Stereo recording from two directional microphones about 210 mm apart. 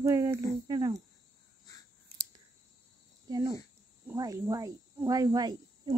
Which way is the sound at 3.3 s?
15° right (ahead or behind).